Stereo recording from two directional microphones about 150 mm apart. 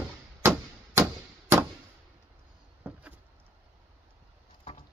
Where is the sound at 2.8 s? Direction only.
10° right (ahead or behind).